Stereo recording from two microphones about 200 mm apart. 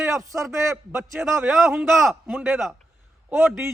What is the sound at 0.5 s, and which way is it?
Speech, 15° right (ahead or behind).